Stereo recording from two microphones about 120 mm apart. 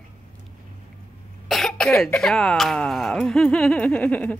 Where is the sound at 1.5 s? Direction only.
5° left (ahead or behind).